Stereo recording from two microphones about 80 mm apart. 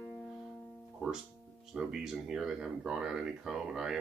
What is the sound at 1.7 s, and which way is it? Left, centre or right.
Speech, centre.